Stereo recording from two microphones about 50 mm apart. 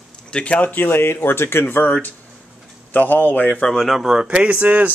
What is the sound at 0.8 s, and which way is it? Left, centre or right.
Speech, left.